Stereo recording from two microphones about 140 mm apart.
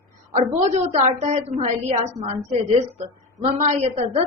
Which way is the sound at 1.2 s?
50° right (ahead or behind).